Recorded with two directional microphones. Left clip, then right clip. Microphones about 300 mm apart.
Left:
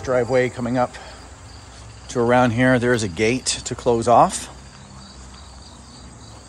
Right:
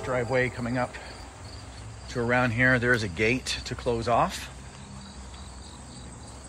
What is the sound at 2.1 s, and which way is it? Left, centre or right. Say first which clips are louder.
Speech: left 9 dB; centre.